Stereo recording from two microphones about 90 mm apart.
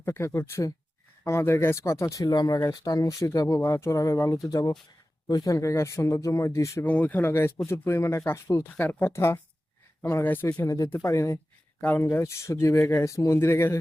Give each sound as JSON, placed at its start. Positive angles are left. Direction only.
{"t": 0.0, "sound": "speech", "side_deg": 30}
{"t": 2.2, "sound": "speech", "side_deg": 50}
{"t": 2.6, "sound": "speech", "side_deg": 40}
{"t": 6.8, "sound": "speech", "side_deg": 20}
{"t": 8.6, "sound": "speech", "side_deg": 20}
{"t": 11.8, "sound": "speech", "side_deg": 20}
{"t": 12.1, "sound": "speech", "side_deg": 30}